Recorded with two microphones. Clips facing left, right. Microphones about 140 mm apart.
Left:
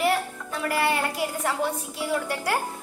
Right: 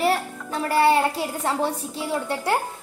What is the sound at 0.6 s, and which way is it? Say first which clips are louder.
A woman's voice: right 6 dB; 30° right (ahead or behind).